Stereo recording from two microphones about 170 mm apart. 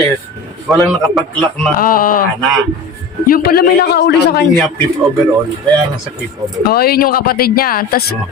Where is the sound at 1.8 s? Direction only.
55° left (ahead or behind).